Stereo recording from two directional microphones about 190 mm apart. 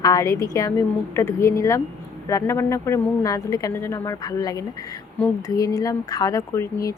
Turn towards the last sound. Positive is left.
turn(degrees=15)  # may be behind; listen again after turning